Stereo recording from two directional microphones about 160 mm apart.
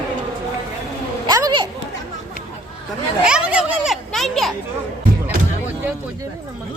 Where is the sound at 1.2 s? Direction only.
25° right (ahead or behind).